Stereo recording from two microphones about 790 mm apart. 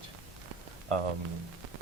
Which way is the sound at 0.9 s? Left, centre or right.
Right.